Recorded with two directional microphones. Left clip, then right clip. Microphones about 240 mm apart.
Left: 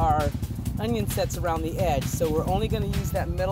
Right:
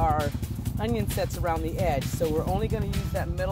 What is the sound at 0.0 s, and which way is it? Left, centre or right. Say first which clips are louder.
Vehicle: left 2 dB; centre.